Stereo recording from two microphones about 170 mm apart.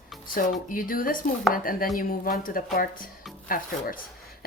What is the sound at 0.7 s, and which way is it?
Speech, 55° left (ahead or behind).